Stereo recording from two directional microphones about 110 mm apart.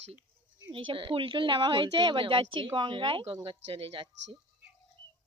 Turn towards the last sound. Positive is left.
turn(degrees=-60)  # may be behind; listen again after turning